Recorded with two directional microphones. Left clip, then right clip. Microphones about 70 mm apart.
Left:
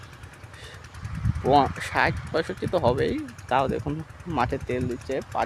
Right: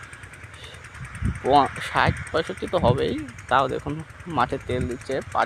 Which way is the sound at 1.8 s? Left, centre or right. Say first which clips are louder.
Right 2 dB; left.